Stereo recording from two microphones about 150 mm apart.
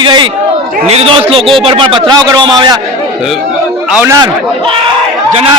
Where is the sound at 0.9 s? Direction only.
40° right (ahead or behind).